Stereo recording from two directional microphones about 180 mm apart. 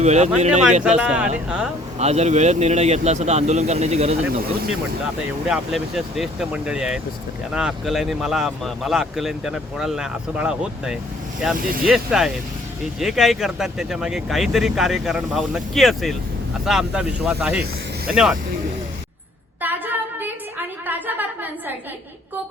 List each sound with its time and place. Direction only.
0.0 s speech: 40° right (ahead or behind)
0.9 s speech: 5° right (ahead or behind)
2.0 s speech: 35° right (ahead or behind)
5.5 s speech: centre (ahead or behind)
11.5 s speech: 55° right (ahead or behind)
11.9 s speech: 5° right (ahead or behind)
19.6 s a sound: 10° right (ahead or behind)